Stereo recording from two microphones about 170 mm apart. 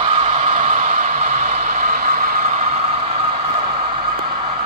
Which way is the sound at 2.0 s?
60° right (ahead or behind).